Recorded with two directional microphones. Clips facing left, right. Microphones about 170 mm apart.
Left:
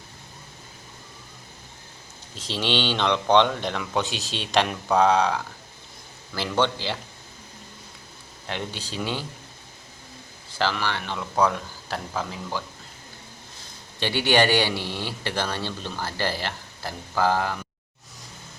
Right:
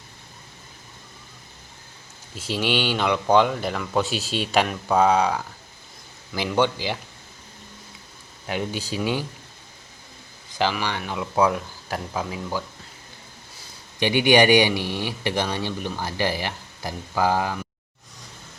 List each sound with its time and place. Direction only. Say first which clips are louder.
2.3 s a man's voice: right 2 dB; 10° right (ahead or behind)
8.4 s a man's voice: right 5 dB; 10° right (ahead or behind)
10.5 s a man's voice: right 2 dB; 15° right (ahead or behind)
14.0 s a man's voice: right 4 dB; 15° right (ahead or behind)